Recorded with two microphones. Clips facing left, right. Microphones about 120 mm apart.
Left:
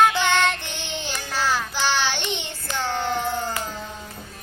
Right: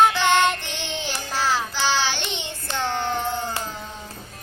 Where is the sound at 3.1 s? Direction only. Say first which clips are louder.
Left 1 dB; 20° right (ahead or behind).